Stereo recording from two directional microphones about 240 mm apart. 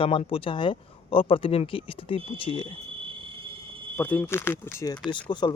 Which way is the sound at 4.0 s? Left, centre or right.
Centre.